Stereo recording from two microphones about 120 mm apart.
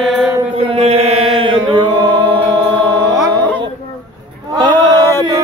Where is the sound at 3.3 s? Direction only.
15° left (ahead or behind).